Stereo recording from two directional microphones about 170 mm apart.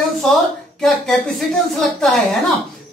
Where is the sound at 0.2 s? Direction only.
Centre (ahead or behind).